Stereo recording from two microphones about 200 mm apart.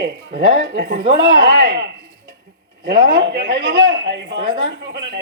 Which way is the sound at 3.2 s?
60° right (ahead or behind).